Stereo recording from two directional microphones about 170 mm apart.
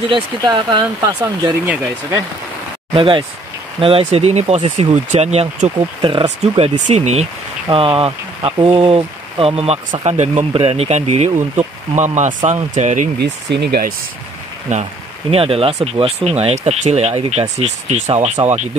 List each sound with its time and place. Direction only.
0.1 s speech: 25° right (ahead or behind)
2.9 s speech: 30° right (ahead or behind); by 13.1 s 45° right (ahead or behind)
13.2 s speech: 75° right (ahead or behind)
14.7 s speech: 45° right (ahead or behind)
15.3 s speech: 35° right (ahead or behind)